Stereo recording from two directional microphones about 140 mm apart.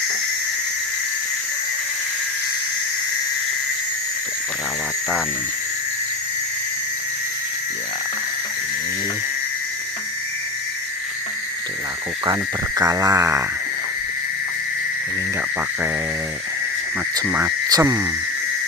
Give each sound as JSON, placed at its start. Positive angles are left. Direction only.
{"t": 12.2, "sound": "speech", "side_deg": -25}
{"t": 17.2, "sound": "speech", "side_deg": -15}
{"t": 17.7, "sound": "frog", "side_deg": -25}